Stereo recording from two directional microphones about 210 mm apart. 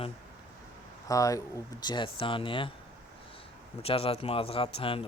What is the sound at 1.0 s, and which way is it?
Speech, 15° left (ahead or behind).